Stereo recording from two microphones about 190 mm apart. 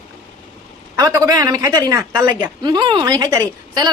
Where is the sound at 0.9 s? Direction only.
20° right (ahead or behind).